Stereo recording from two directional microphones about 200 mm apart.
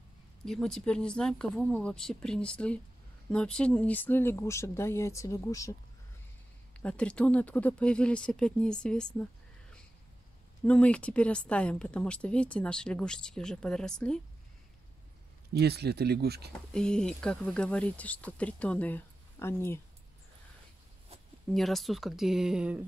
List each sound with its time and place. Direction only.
0.5 s a woman's voice: 5° left (ahead or behind)
6.8 s a woman's voice: 5° left (ahead or behind)
15.5 s speech: 55° right (ahead or behind)
16.5 s speech: 5° left (ahead or behind)
21.5 s a woman's voice: centre (ahead or behind)